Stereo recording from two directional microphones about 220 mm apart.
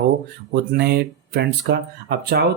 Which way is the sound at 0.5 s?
45° right (ahead or behind).